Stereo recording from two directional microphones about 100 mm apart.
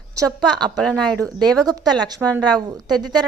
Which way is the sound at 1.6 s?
40° right (ahead or behind).